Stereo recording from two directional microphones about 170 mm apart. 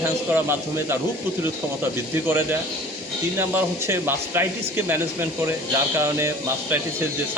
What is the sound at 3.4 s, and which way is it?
Speech, 15° right (ahead or behind).